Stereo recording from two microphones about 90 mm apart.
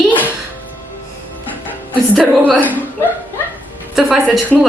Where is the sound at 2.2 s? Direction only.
10° left (ahead or behind).